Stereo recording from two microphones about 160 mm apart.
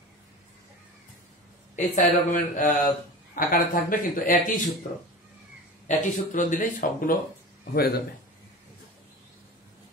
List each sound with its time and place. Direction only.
2.0 s speech: 55° left (ahead or behind)
5.9 s speech: 55° left (ahead or behind)
7.7 s a man's voice: 75° left (ahead or behind)